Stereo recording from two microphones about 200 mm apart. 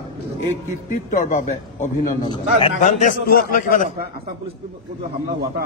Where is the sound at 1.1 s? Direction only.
40° left (ahead or behind).